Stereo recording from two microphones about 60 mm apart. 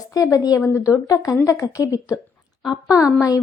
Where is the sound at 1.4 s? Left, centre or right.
Left.